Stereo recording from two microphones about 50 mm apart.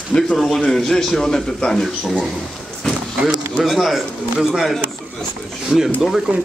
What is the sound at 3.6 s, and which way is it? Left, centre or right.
A man's voice, centre.